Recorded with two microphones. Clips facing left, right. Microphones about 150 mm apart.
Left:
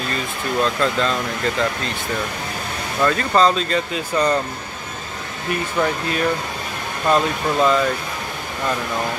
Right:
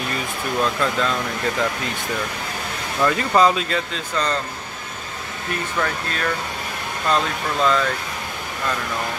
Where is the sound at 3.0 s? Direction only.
15° right (ahead or behind).